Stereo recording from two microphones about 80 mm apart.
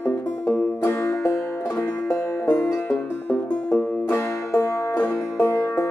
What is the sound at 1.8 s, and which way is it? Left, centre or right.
Music, left.